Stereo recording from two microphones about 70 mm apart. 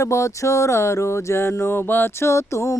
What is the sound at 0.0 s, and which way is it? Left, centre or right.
Mantra, left.